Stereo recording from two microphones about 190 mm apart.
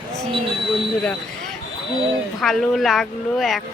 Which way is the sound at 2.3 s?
Centre (ahead or behind).